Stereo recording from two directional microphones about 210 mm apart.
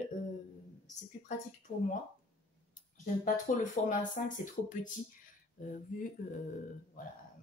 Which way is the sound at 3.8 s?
35° left (ahead or behind).